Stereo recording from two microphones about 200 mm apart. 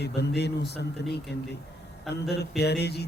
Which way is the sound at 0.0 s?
55° left (ahead or behind).